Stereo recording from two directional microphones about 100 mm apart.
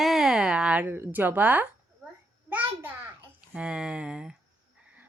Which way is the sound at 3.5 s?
10° right (ahead or behind).